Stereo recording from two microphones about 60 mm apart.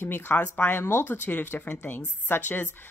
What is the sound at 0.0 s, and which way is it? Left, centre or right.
Speech, left.